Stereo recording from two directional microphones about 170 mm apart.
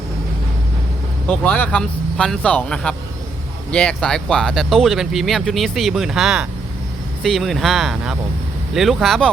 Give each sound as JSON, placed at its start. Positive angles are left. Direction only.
{"t": 1.3, "sound": "speech", "side_deg": 10}